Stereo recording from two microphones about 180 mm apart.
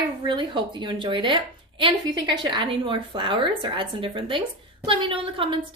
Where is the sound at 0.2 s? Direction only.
25° right (ahead or behind).